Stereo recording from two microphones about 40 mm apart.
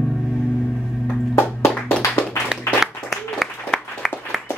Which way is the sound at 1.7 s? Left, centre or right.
Left.